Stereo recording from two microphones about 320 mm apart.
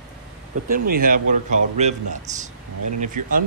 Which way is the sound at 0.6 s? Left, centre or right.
Right.